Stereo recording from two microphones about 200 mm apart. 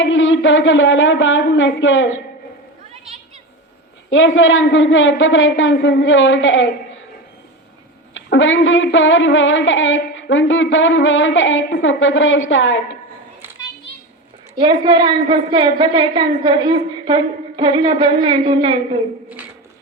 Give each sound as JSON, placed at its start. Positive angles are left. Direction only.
{"t": 0.0, "sound": "speech", "side_deg": 75}
{"t": 4.1, "sound": "speech", "side_deg": 75}
{"t": 8.1, "sound": "speech", "side_deg": 70}
{"t": 14.6, "sound": "a woman's voice", "side_deg": -25}